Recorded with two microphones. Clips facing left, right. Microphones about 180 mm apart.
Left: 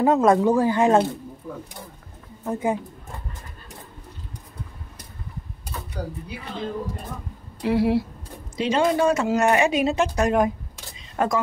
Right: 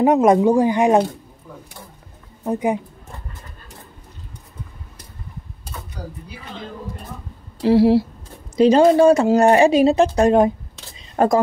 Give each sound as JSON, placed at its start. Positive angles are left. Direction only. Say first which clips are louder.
{"t": 0.0, "sound": "speech", "louder": "right 4 dB", "side_deg": -20}
{"t": 2.4, "sound": "speech", "louder": "right 4 dB", "side_deg": -15}
{"t": 7.6, "sound": "speech", "louder": "right 7 dB", "side_deg": -30}